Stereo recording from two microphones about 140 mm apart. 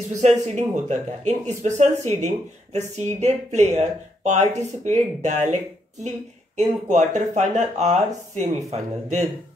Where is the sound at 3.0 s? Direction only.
55° right (ahead or behind).